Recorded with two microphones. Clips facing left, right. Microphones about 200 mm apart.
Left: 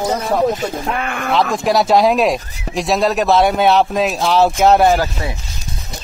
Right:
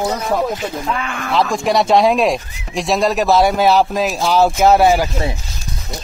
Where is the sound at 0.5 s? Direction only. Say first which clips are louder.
Left 1 dB; 50° left (ahead or behind).